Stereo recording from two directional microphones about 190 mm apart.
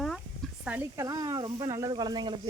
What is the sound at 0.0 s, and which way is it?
Speech, centre (ahead or behind).